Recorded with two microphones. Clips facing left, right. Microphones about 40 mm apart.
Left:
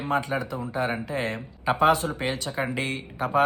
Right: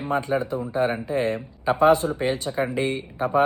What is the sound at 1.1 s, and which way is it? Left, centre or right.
Speech, left.